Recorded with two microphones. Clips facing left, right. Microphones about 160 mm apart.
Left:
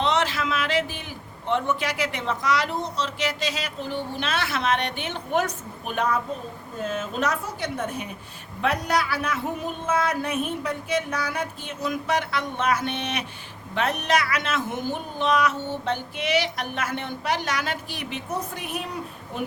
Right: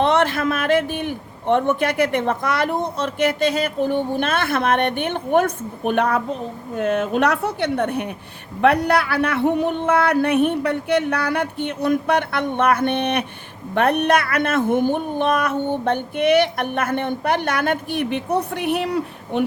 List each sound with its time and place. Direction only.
0.0 s a man's voice: 55° right (ahead or behind)